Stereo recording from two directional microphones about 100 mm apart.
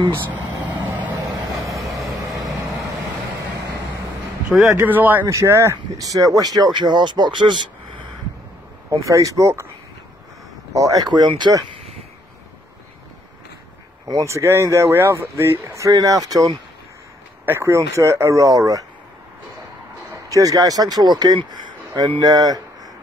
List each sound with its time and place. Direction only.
0.5 s vehicle: 45° right (ahead or behind)
1.2 s vehicle: 35° right (ahead or behind)
4.8 s speech: 15° right (ahead or behind)
5.2 s speech: 30° right (ahead or behind); by 8.0 s 50° right (ahead or behind)
8.9 s speech: 30° right (ahead or behind)
10.7 s speech: 35° right (ahead or behind)
14.0 s speech: 35° right (ahead or behind)
17.5 s speech: 30° right (ahead or behind)
20.2 s speech: 35° right (ahead or behind)
21.5 s a sound: 45° right (ahead or behind)
22.2 s speech: 40° right (ahead or behind)